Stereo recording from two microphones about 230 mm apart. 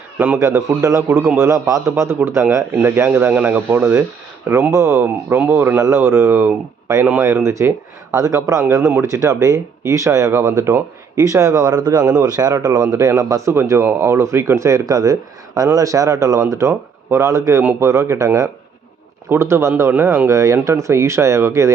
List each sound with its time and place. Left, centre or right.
0.2 s speech: centre